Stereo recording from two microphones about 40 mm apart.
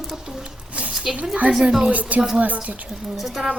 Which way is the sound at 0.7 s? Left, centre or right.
Right.